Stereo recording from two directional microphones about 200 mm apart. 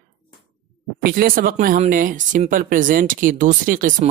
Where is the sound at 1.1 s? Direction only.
45° right (ahead or behind).